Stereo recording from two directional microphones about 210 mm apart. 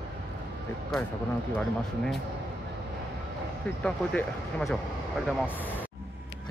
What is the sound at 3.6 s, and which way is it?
Speech, 5° left (ahead or behind).